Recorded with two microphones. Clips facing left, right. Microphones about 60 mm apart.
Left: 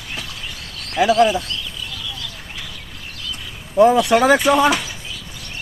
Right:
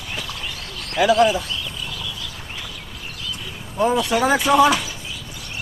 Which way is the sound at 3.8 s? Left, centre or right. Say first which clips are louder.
Left 6 dB; left.